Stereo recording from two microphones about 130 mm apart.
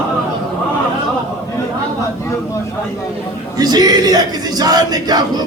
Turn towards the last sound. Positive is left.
turn(degrees=-30)  # may be behind; listen again after turning